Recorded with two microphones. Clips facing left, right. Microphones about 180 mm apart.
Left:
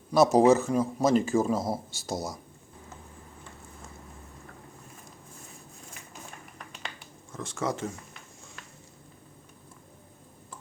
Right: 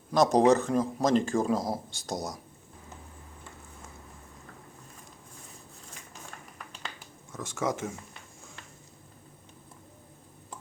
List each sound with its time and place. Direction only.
0.1 s speech: 5° left (ahead or behind)
7.3 s speech: 5° right (ahead or behind)